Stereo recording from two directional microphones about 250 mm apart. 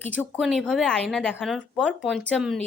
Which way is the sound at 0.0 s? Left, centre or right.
Centre.